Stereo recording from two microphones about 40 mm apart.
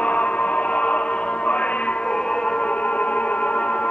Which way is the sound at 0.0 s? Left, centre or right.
Left.